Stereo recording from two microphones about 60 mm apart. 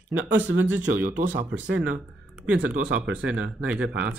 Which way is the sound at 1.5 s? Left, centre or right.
Right.